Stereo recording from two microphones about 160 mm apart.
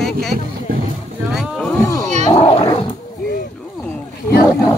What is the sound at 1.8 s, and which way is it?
Speech, 20° left (ahead or behind).